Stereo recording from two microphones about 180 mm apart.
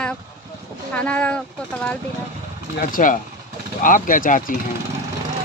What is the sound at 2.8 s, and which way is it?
Speech, 50° left (ahead or behind).